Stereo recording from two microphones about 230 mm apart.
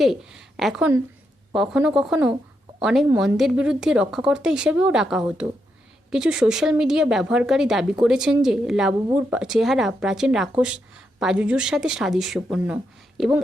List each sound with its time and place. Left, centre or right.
0.0 s speech: centre